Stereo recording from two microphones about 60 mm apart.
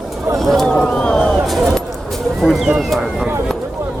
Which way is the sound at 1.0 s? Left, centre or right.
Centre.